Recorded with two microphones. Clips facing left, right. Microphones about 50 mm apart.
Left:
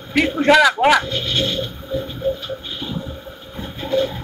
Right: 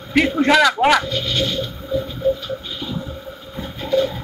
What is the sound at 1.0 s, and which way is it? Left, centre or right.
Speech, left.